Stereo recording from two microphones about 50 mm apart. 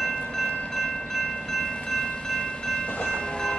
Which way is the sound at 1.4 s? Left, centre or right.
Centre.